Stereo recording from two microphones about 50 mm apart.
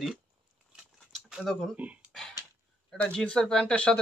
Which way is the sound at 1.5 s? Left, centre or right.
Centre.